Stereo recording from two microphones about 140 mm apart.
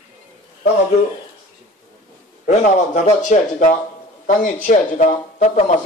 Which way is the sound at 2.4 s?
55° left (ahead or behind).